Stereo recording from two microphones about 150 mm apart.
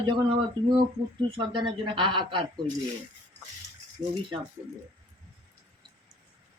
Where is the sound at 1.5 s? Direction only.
35° right (ahead or behind).